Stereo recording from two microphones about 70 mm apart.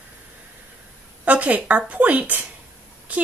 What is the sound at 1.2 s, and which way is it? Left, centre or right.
Speech, right.